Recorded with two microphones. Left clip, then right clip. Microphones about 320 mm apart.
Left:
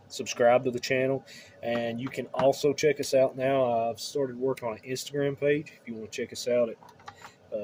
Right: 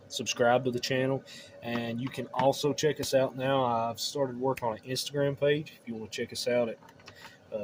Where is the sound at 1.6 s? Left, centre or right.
Right.